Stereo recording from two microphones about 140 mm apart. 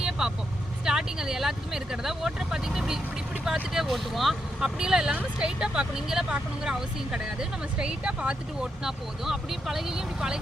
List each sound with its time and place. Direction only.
0.0 s vehicle: 5° right (ahead or behind)
0.9 s speech: 5° right (ahead or behind)